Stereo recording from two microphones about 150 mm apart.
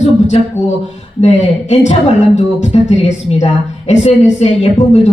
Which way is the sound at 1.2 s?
50° left (ahead or behind).